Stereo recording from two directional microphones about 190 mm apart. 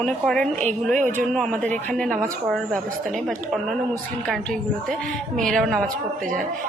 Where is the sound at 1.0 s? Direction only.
40° right (ahead or behind).